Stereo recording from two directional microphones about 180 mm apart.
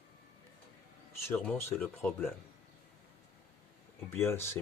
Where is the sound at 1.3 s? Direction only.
10° left (ahead or behind).